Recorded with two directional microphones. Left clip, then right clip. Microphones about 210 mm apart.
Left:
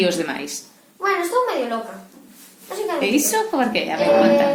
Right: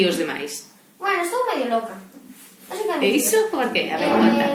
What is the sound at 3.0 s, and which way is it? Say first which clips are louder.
Speech: right 1 dB; 45° left (ahead or behind).